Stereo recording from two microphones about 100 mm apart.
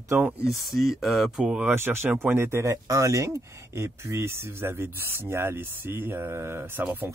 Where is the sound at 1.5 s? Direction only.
20° right (ahead or behind).